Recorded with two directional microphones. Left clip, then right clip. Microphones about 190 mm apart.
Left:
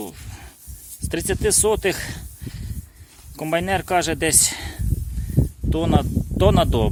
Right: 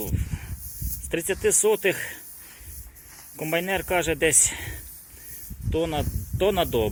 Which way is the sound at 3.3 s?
40° left (ahead or behind).